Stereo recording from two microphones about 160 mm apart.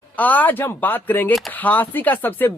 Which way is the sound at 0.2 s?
10° left (ahead or behind).